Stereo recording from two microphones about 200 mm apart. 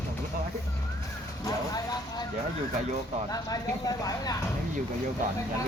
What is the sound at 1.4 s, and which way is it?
Vehicle, 20° left (ahead or behind).